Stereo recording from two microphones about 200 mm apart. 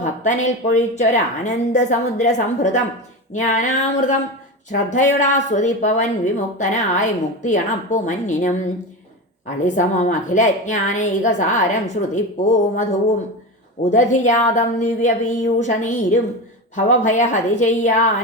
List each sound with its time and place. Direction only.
0.0 s a woman's voice: 35° left (ahead or behind)
9.6 s a woman's voice: 40° left (ahead or behind)